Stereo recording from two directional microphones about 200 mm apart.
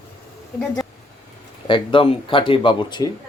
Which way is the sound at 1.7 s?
25° left (ahead or behind).